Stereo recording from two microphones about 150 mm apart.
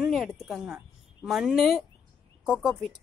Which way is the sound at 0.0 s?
Centre (ahead or behind).